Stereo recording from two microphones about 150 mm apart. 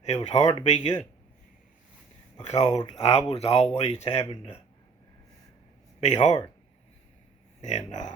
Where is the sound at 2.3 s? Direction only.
50° left (ahead or behind).